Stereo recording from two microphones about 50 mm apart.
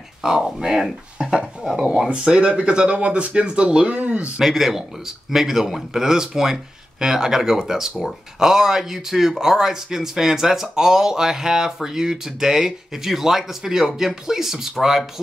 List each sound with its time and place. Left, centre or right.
0.2 s a man's voice: centre; by 4.3 s right
4.4 s a man's voice: centre